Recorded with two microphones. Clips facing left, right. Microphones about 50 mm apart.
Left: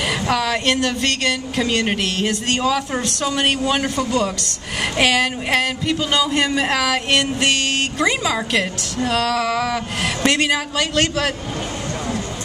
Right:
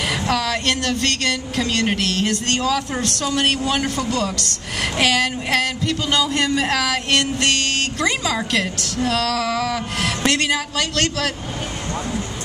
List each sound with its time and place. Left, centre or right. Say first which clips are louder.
0.3 s speech: left 2 dB; centre